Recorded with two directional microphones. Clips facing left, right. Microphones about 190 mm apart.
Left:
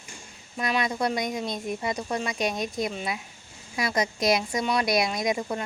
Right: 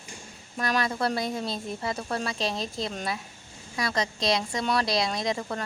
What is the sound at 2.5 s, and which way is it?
Speech, 25° right (ahead or behind).